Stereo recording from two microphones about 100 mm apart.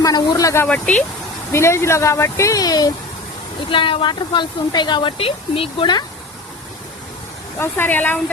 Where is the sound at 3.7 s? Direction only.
60° left (ahead or behind).